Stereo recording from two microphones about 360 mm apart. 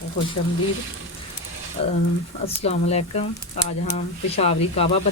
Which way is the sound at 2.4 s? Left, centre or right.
Centre.